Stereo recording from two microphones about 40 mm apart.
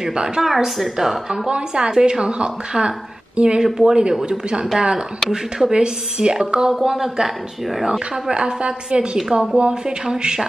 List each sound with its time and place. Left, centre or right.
0.0 s a woman's voice: right
0.4 s speech: centre
1.5 s speech: right
6.7 s speech: centre
8.3 s speech: right